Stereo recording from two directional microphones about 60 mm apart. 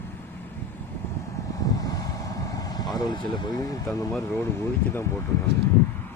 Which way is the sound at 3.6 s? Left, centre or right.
Left.